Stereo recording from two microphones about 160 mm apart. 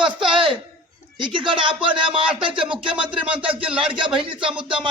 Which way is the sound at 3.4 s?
35° right (ahead or behind).